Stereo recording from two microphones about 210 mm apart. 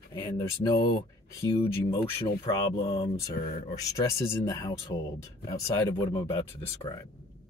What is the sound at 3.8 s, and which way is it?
Speech, 15° left (ahead or behind).